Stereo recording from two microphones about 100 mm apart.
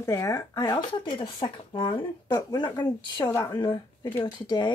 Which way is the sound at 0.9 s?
55° left (ahead or behind).